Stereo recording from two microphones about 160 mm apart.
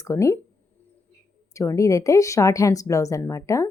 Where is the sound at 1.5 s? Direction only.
20° left (ahead or behind).